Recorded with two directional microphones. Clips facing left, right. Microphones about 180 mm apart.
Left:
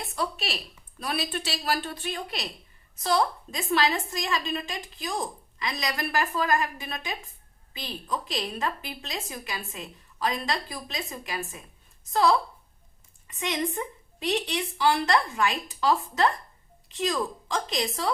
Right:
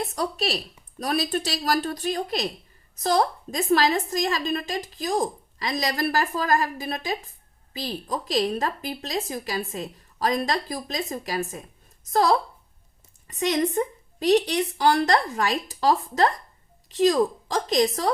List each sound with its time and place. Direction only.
0.0 s a woman's voice: 40° right (ahead or behind)